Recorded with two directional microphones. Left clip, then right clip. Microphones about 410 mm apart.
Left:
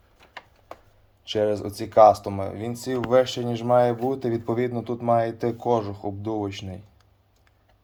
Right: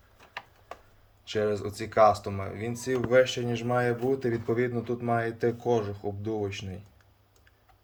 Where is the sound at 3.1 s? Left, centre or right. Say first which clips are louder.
Left 3 dB; left.